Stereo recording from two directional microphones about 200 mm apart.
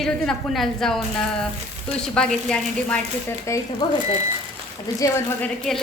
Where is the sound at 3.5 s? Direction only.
15° left (ahead or behind).